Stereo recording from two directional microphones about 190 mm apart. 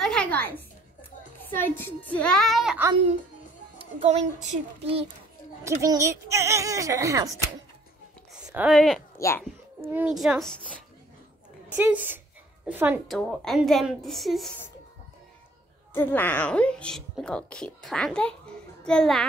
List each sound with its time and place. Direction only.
0.0 s a sound: 5° left (ahead or behind)
1.6 s a woman's voice: 10° left (ahead or behind); by 2.9 s 5° right (ahead or behind)
3.7 s a child's voice: 35° right (ahead or behind)
5.6 s speech: 15° right (ahead or behind)
8.6 s a woman's voice: centre (ahead or behind)
11.7 s speech: 10° right (ahead or behind)
13.1 s a woman's voice: centre (ahead or behind)
15.9 s a woman's voice: 10° left (ahead or behind)